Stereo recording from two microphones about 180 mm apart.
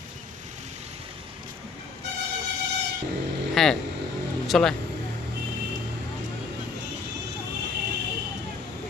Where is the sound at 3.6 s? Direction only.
Centre (ahead or behind).